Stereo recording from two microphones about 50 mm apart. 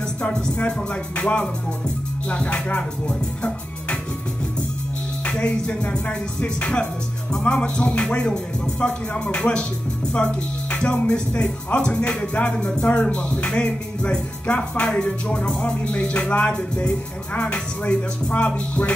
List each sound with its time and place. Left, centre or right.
0.6 s speech: left
5.2 s speech: left